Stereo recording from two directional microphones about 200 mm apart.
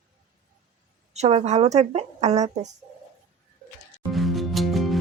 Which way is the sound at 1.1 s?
30° right (ahead or behind).